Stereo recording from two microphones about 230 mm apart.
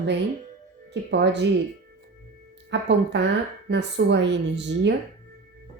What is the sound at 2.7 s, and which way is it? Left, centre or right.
A woman's voice, right.